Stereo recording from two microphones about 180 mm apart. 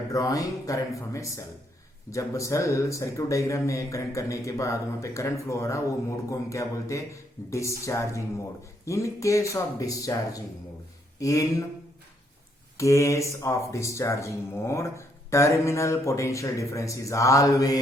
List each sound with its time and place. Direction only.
0.1 s speech: 20° left (ahead or behind)
12.7 s speech: 15° left (ahead or behind)